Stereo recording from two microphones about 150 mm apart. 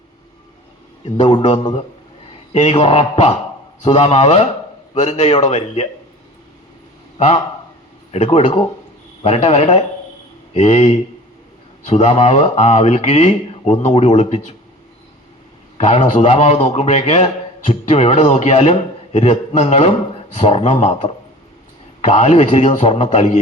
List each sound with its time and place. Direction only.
1.1 s a man's voice: 35° left (ahead or behind)
2.5 s a man's voice: 45° left (ahead or behind)
8.1 s speech: 45° left (ahead or behind)
15.8 s speech: 50° left (ahead or behind)
22.0 s speech: 50° left (ahead or behind)